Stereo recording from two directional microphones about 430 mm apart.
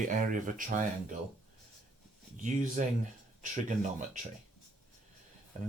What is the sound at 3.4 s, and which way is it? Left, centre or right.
Speech, centre.